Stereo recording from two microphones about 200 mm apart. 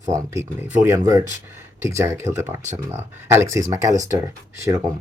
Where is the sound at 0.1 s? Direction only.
15° right (ahead or behind).